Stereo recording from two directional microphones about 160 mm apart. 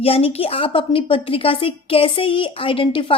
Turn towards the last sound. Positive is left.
turn(degrees=35)  # may be behind; listen again after turning